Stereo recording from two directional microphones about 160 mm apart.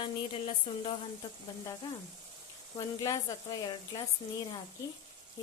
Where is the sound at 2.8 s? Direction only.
25° left (ahead or behind).